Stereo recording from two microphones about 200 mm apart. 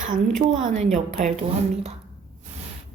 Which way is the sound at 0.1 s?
40° right (ahead or behind).